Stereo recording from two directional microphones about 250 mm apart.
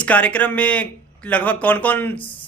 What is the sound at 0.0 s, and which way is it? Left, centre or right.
Speech, centre.